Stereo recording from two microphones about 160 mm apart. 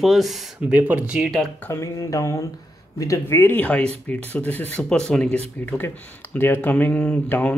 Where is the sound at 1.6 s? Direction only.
20° left (ahead or behind).